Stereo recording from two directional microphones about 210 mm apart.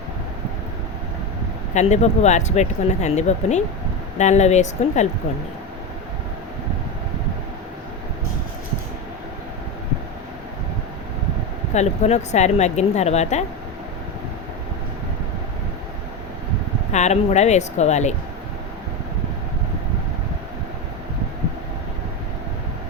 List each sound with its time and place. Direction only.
1.7 s speech: 35° left (ahead or behind)
11.7 s speech: 30° left (ahead or behind)
16.9 s speech: 35° left (ahead or behind)